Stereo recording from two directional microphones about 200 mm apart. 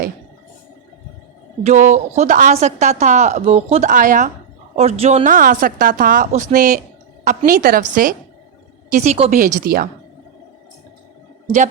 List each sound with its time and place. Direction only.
1.6 s a woman's voice: 35° right (ahead or behind)
4.7 s a woman's voice: 30° right (ahead or behind); by 9.9 s 45° right (ahead or behind)